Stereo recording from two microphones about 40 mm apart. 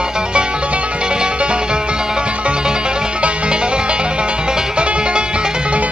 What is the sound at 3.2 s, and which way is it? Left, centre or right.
Music, right.